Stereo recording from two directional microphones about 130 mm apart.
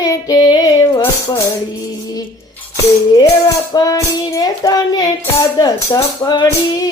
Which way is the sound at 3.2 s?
30° left (ahead or behind).